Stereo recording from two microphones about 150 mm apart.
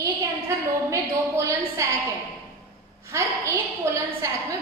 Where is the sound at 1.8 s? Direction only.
20° right (ahead or behind).